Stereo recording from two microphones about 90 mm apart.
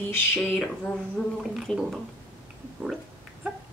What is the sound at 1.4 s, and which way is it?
Speech, 5° right (ahead or behind).